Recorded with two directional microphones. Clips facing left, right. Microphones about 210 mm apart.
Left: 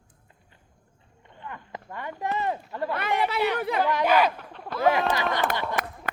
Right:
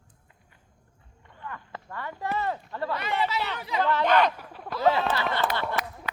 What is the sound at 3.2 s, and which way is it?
Chatter, 55° left (ahead or behind).